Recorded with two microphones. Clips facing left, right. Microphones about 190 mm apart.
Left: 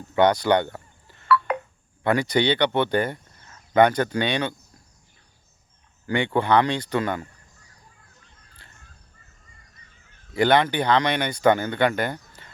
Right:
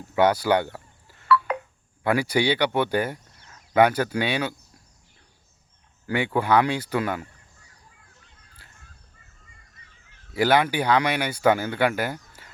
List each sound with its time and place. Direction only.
0.2 s telephone dialing: 10° right (ahead or behind)
1.5 s telephone dialing: 55° left (ahead or behind)
2.0 s speech: 10° right (ahead or behind)
6.1 s speech: 5° right (ahead or behind)
10.3 s speech: 5° right (ahead or behind)